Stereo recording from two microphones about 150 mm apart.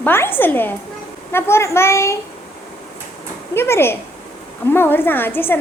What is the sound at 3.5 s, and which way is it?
A woman's voice, 15° left (ahead or behind).